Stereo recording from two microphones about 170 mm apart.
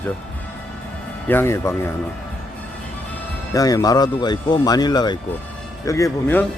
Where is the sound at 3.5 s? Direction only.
20° left (ahead or behind).